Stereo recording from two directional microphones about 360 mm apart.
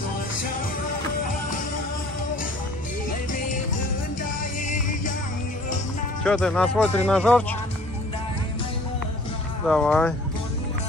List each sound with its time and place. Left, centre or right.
4.2 s music: left
6.2 s speech: centre
9.7 s speech: centre